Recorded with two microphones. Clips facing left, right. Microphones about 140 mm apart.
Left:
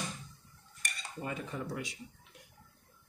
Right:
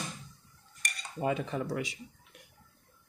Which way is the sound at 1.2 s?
90° right.